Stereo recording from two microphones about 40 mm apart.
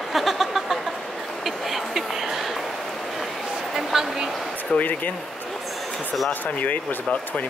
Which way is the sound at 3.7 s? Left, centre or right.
Centre.